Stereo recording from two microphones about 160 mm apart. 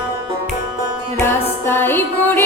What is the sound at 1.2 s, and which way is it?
Music, 15° left (ahead or behind).